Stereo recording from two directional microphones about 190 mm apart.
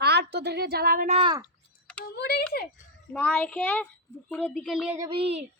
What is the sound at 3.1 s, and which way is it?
A child's voice, 10° left (ahead or behind).